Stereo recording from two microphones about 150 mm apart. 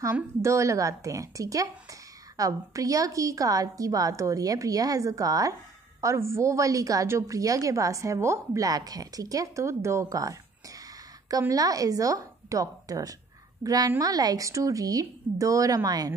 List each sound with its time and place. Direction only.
0.0 s a woman's voice: 20° right (ahead or behind)